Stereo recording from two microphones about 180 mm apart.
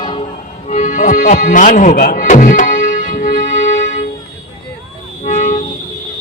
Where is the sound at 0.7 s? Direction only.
45° left (ahead or behind).